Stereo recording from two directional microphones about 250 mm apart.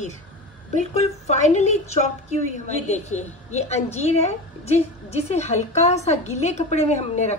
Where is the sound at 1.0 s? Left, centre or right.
Left.